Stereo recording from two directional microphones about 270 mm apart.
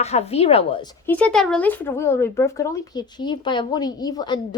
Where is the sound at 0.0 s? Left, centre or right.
Left.